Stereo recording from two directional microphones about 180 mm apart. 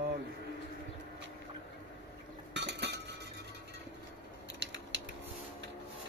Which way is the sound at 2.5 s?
75° right (ahead or behind).